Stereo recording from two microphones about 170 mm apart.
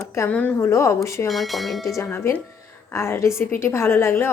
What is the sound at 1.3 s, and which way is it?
Speech, centre (ahead or behind).